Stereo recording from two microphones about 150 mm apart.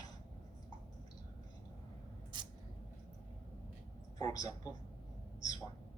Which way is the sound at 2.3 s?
30° right (ahead or behind).